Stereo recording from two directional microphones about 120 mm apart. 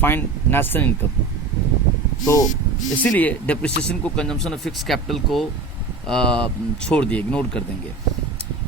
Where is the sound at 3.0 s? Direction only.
15° left (ahead or behind).